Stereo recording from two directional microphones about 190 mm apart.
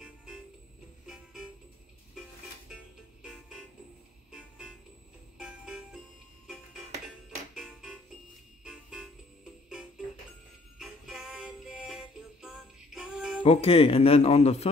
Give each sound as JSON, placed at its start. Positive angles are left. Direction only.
{"t": 1.0, "sound": "music", "side_deg": 0}
{"t": 2.7, "sound": "music", "side_deg": -5}
{"t": 6.4, "sound": "music", "side_deg": 0}
{"t": 10.8, "sound": "music", "side_deg": 0}
{"t": 13.4, "sound": "speech", "side_deg": 30}